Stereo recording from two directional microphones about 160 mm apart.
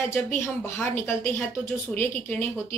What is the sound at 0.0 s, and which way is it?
A woman's voice, 15° left (ahead or behind).